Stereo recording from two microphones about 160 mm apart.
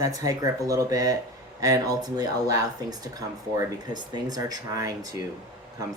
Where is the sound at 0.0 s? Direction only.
20° right (ahead or behind).